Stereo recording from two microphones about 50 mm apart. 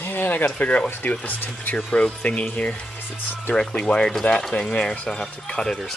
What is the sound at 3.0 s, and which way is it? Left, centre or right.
Speech, left.